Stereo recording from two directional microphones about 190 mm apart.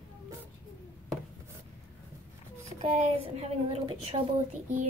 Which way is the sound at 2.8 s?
35° right (ahead or behind).